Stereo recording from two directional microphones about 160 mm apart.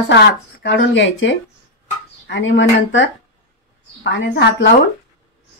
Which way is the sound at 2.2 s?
90° left.